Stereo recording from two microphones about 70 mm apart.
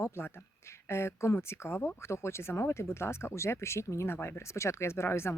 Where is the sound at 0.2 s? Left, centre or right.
Left.